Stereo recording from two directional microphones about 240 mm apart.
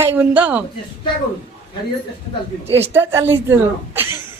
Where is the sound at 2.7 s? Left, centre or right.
Centre.